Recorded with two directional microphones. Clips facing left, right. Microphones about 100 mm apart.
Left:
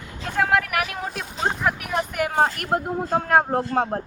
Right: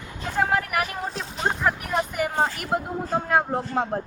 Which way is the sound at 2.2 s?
55° left (ahead or behind).